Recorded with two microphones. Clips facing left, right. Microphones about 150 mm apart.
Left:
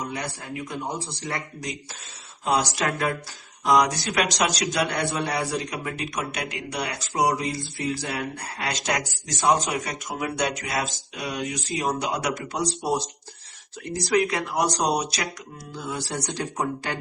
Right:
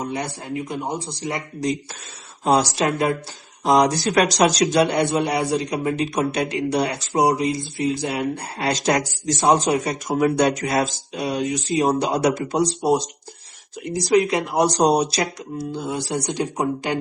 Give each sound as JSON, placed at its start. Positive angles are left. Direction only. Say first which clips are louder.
{"t": 0.0, "sound": "speech", "louder": "right 5 dB", "side_deg": -25}
{"t": 2.4, "sound": "speech", "louder": "right 5 dB", "side_deg": -35}
{"t": 4.6, "sound": "speech", "louder": "right 7 dB", "side_deg": -30}